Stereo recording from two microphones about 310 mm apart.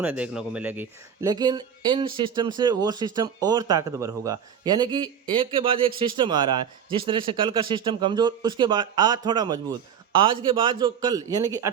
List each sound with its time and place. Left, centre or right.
0.0 s speech: centre